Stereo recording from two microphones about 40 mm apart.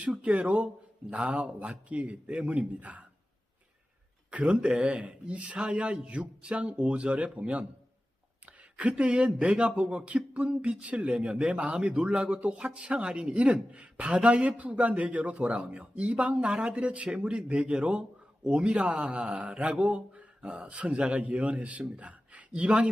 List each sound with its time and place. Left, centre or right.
0.2 s speech: right
4.3 s speech: right
8.7 s speech: right
16.3 s speech: right